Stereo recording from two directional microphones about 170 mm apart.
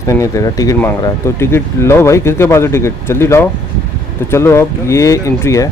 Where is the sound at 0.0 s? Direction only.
20° left (ahead or behind).